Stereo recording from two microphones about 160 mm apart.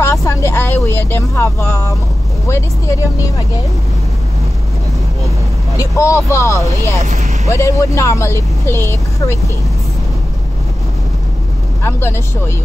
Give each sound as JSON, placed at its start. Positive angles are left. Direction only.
{"t": 0.0, "sound": "vehicle", "side_deg": 20}
{"t": 2.4, "sound": "speech", "side_deg": 20}
{"t": 5.8, "sound": "speech", "side_deg": 20}
{"t": 7.0, "sound": "speech", "side_deg": -45}
{"t": 7.4, "sound": "speech", "side_deg": 20}
{"t": 11.8, "sound": "speech", "side_deg": 15}